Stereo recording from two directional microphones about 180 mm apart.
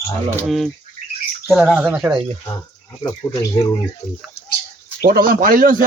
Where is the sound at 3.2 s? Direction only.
15° left (ahead or behind).